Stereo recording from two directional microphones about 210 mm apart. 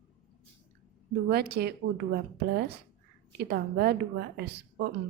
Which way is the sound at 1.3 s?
50° right (ahead or behind).